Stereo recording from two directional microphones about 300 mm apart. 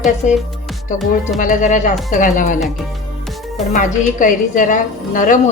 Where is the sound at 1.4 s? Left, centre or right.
Left.